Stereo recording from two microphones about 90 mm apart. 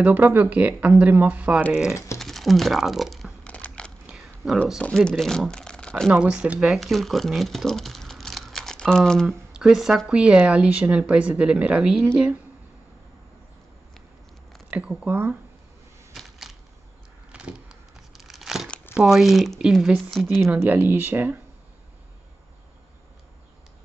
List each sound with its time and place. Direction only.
0.0 s speech: 20° right (ahead or behind)
2.1 s speech: centre (ahead or behind)
3.4 s a sound: 15° left (ahead or behind)
4.1 s a sound: 5° right (ahead or behind)
4.9 s speech: 5° left (ahead or behind)
6.1 s speech: 10° right (ahead or behind); by 9.4 s 5° left (ahead or behind)
9.5 s speech: 5° right (ahead or behind)
14.7 s speech: 15° right (ahead or behind)
15.0 s speech: 25° right (ahead or behind)
16.1 s a sound: centre (ahead or behind)
17.3 s vehicle: 10° right (ahead or behind)
18.1 s crumpling: centre (ahead or behind)
18.9 s speech: 5° right (ahead or behind)
20.6 s speech: 20° right (ahead or behind)